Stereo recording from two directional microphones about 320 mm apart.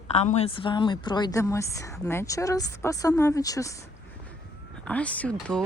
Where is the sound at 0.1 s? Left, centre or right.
Left.